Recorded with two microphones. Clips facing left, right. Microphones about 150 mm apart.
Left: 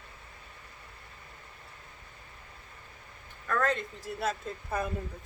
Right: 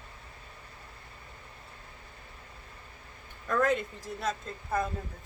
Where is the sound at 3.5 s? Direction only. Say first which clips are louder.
Right 2 dB; 10° right (ahead or behind).